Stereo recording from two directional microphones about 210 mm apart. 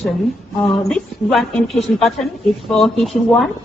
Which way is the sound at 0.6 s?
Centre (ahead or behind).